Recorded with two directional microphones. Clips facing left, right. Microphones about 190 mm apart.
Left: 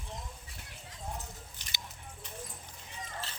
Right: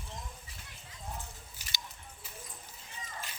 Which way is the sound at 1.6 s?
5° right (ahead or behind).